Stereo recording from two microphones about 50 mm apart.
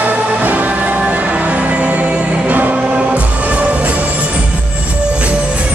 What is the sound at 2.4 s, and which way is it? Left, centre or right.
Choir, right.